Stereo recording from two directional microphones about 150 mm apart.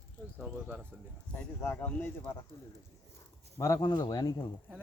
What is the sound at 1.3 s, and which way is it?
Speech, 10° left (ahead or behind).